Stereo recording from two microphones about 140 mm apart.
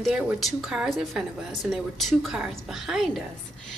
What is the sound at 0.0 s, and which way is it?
A woman's voice, centre (ahead or behind).